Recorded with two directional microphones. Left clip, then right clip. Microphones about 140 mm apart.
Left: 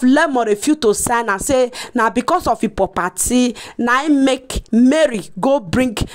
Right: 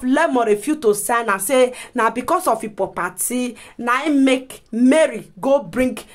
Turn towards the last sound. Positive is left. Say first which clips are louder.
# left 1 dB
turn(degrees=70)  # may be behind; listen again after turning